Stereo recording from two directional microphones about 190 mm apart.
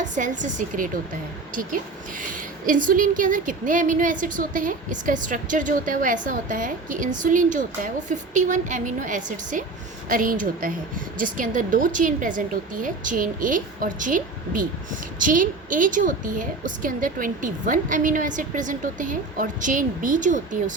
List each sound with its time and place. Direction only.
0.0 s speech: 40° right (ahead or behind)
2.3 s speech: 45° right (ahead or behind)